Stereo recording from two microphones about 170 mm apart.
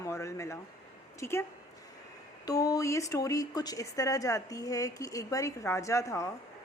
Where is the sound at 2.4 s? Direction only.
20° left (ahead or behind).